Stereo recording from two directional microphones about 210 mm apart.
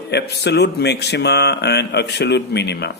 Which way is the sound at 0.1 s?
50° left (ahead or behind).